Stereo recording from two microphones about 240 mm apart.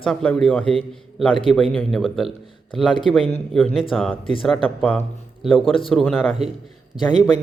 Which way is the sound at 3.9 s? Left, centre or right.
Centre.